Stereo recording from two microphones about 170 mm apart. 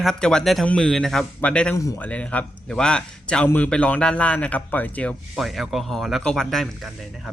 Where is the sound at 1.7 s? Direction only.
20° left (ahead or behind).